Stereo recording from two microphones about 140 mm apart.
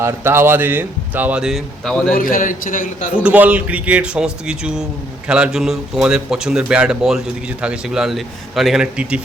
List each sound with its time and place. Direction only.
0.0 s speech: 15° right (ahead or behind); by 2.1 s 5° left (ahead or behind)
2.1 s a man's voice: 80° left
3.2 s speech: 10° right (ahead or behind)